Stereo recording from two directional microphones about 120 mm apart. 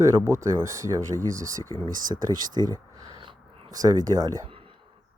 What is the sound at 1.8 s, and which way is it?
Speech, 35° right (ahead or behind).